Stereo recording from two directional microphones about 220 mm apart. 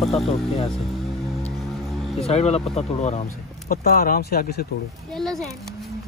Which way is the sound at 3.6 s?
40° left (ahead or behind).